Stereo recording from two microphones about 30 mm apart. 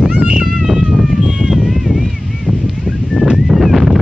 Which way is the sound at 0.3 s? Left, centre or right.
Right.